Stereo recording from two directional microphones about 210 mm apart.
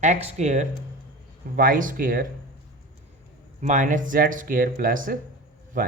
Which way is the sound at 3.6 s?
35° right (ahead or behind).